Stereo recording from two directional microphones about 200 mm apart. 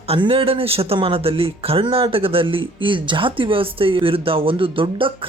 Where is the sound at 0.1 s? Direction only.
25° right (ahead or behind).